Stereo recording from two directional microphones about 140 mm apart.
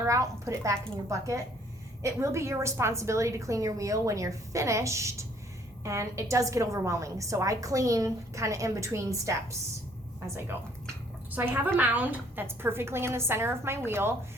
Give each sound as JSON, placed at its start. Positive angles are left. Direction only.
{"t": 0.0, "sound": "a woman's voice", "side_deg": -20}
{"t": 11.3, "sound": "a woman's voice", "side_deg": -10}